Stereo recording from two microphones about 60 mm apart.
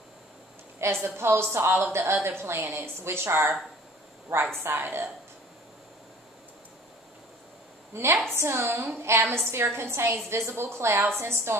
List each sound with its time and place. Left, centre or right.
1.0 s a woman's voice: right
4.6 s a woman's voice: right
7.9 s a woman's voice: right